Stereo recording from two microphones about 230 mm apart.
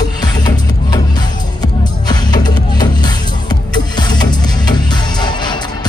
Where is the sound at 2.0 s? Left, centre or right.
Centre.